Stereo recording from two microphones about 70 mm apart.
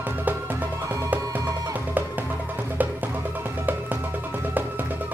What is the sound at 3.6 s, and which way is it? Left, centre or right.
Music, right.